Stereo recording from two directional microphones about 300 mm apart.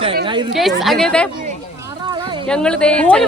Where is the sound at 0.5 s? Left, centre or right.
Centre.